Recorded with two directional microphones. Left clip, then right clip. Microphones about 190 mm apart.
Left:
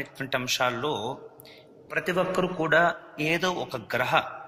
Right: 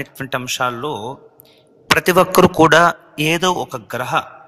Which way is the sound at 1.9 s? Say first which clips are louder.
Right 13 dB; 45° right (ahead or behind).